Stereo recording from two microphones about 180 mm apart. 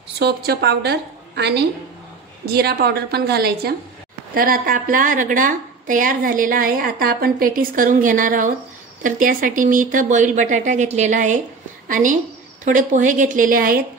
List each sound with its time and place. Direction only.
0.2 s a woman's voice: 65° right (ahead or behind)